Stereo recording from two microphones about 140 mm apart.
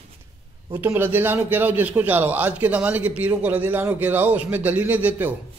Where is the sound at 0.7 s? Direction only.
15° right (ahead or behind).